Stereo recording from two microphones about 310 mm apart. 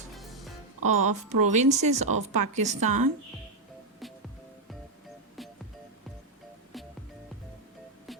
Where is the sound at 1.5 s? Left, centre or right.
Right.